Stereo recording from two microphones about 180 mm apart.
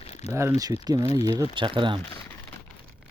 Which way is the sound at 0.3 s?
15° right (ahead or behind).